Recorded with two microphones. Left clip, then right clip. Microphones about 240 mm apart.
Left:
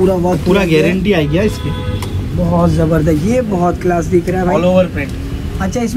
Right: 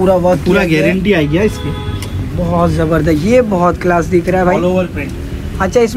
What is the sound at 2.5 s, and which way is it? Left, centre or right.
Speech, centre.